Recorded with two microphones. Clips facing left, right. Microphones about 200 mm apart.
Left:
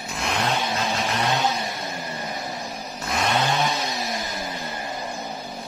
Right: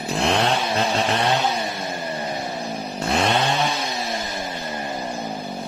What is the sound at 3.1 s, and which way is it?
Vehicle, 30° right (ahead or behind).